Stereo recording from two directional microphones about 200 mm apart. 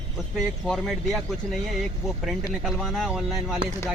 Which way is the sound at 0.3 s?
Centre (ahead or behind).